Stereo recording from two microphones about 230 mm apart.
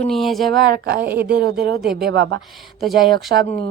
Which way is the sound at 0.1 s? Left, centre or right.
Centre.